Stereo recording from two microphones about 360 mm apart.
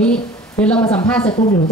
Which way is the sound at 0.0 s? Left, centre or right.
Centre.